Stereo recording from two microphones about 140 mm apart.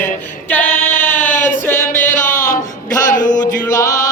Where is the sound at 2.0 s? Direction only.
65° left (ahead or behind).